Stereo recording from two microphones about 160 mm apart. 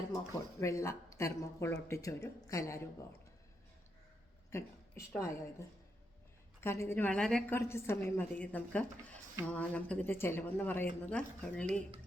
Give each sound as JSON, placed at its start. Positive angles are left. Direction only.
{"t": 0.6, "sound": "speech", "side_deg": 20}
{"t": 4.5, "sound": "a woman's voice", "side_deg": 20}